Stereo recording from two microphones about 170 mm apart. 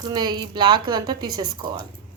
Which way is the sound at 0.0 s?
25° right (ahead or behind).